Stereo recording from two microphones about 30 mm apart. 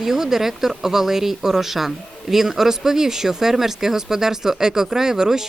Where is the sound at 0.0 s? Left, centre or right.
Centre.